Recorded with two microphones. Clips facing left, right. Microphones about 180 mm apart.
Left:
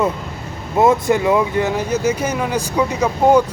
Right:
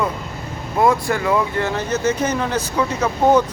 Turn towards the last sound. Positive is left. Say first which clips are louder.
# left 2 dB
turn(degrees=10)  # may be behind; listen again after turning